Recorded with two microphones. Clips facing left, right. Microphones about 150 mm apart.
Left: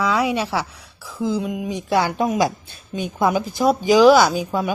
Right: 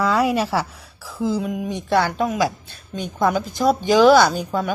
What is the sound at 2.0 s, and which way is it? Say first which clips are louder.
A woman's voice: left 1 dB; 15° left (ahead or behind).